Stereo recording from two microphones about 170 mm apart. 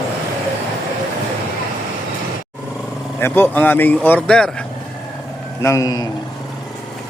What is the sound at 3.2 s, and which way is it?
Speech, 10° left (ahead or behind).